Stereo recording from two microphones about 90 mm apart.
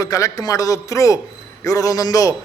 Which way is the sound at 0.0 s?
40° left (ahead or behind).